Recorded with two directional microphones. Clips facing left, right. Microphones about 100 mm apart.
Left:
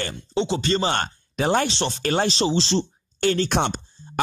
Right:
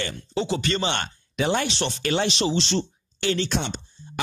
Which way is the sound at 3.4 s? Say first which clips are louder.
Left 5 dB; 60° left (ahead or behind).